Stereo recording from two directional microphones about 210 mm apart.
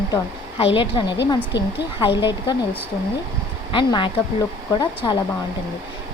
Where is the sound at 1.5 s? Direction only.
55° left (ahead or behind).